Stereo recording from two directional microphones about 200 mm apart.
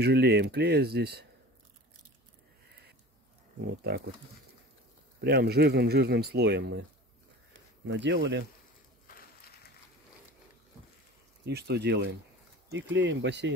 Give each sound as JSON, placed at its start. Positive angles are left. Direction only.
{"t": 0.0, "sound": "speech", "side_deg": -55}
{"t": 3.6, "sound": "speech", "side_deg": -50}
{"t": 5.2, "sound": "speech", "side_deg": -55}
{"t": 7.8, "sound": "speech", "side_deg": -60}
{"t": 11.4, "sound": "speech", "side_deg": -55}